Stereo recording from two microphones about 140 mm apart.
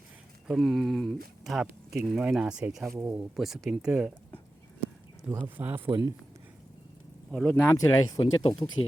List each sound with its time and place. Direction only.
0.4 s speech: centre (ahead or behind)
5.5 s speech: 15° right (ahead or behind)
5.9 s speech: 25° right (ahead or behind)
7.3 s speech: centre (ahead or behind)
7.5 s speech: 15° left (ahead or behind)
8.8 s speech: 40° left (ahead or behind)